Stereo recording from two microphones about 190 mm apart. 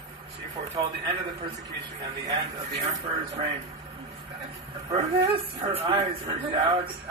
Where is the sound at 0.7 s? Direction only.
20° right (ahead or behind).